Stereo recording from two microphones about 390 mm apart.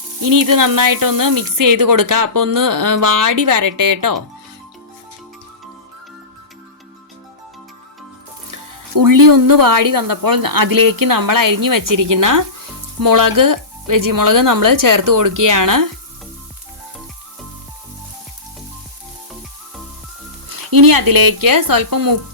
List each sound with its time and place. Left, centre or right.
0.3 s speech: right
9.0 s speech: right
20.6 s speech: right